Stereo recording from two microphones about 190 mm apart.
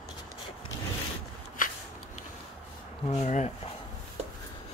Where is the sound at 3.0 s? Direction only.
35° left (ahead or behind).